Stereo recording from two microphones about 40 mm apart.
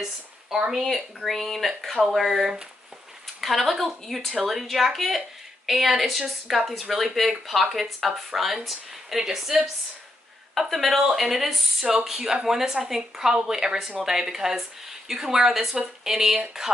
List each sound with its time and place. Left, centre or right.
0.0 s speech: centre
0.7 s speech: centre
10.5 s speech: centre